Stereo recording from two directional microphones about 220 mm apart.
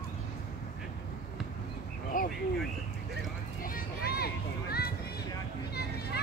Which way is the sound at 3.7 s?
45° left (ahead or behind).